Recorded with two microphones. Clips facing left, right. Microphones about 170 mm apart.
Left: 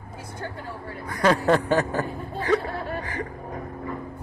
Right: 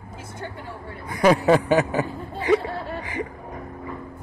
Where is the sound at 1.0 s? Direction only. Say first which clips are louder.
Right 3 dB; 20° right (ahead or behind).